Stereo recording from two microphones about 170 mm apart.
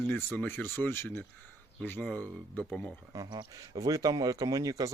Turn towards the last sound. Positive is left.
turn(degrees=-20)  # may be behind; listen again after turning